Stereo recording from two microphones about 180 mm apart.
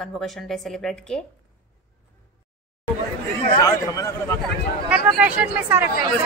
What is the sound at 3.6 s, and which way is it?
Speech, 20° left (ahead or behind).